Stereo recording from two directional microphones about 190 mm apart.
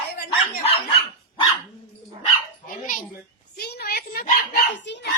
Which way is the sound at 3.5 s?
55° left (ahead or behind).